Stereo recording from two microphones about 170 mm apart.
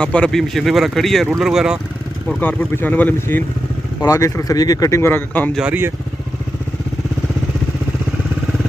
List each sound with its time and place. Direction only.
0.0 s speech: 5° left (ahead or behind)
2.2 s speech: 10° left (ahead or behind)
5.6 s speech: 10° right (ahead or behind)